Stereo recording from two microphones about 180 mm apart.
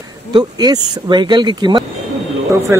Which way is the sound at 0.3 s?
25° right (ahead or behind).